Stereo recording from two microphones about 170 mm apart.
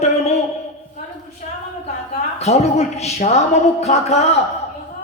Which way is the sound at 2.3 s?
40° left (ahead or behind).